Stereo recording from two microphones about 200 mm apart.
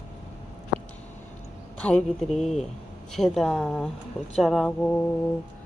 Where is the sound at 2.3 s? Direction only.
35° left (ahead or behind).